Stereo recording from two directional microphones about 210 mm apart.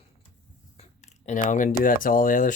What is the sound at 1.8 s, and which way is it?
Speech, 40° left (ahead or behind).